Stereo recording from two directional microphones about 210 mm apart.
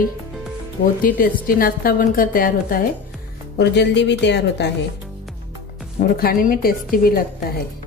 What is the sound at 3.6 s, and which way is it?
A woman's voice, 55° left (ahead or behind).